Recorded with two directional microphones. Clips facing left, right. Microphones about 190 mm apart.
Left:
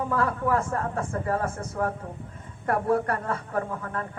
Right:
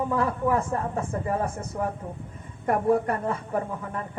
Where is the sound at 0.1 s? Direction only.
20° right (ahead or behind).